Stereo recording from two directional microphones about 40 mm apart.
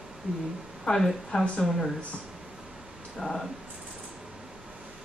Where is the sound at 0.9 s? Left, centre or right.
Left.